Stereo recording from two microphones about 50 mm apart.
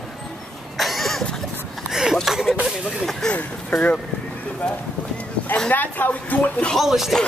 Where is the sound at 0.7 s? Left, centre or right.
Centre.